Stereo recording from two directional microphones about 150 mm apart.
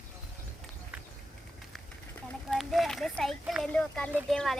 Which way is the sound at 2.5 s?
Centre (ahead or behind).